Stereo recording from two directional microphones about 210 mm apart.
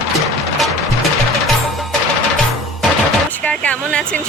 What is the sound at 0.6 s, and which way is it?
Music, centre (ahead or behind).